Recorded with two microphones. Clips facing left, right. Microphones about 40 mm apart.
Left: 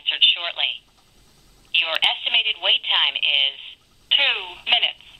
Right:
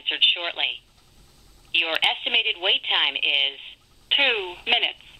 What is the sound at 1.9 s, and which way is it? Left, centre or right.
Speech, centre.